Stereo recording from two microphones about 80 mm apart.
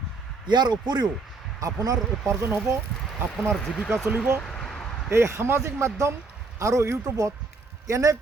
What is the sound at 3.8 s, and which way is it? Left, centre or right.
Speech, centre.